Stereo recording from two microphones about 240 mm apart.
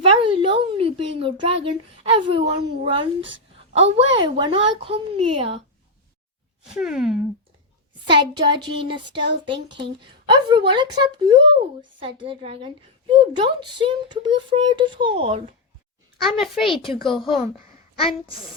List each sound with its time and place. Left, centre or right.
0.0 s a woman's voice: right
6.7 s a child's voice: centre
8.0 s a woman's voice: centre
16.1 s a child's voice: centre
16.6 s speech: left
18.3 s a child's voice: centre